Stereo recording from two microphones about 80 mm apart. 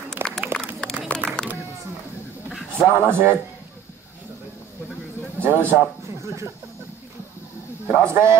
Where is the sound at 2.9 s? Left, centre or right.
Right.